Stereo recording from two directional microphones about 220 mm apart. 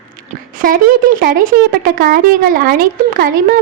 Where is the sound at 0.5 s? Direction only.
40° right (ahead or behind).